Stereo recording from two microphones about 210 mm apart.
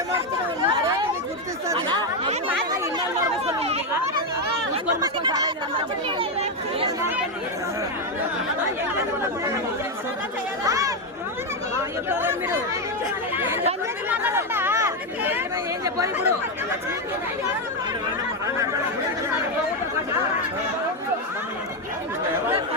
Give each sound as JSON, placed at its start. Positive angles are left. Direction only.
{"t": 1.6, "sound": "chatter", "side_deg": -20}
{"t": 4.9, "sound": "speech", "side_deg": -15}
{"t": 10.6, "sound": "speech", "side_deg": -15}
{"t": 12.0, "sound": "speech", "side_deg": -10}